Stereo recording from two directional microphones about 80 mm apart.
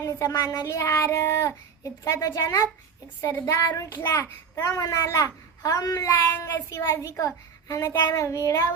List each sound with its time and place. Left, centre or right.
0.0 s a child's voice: left
6.3 s speech: left
6.7 s a child's voice: left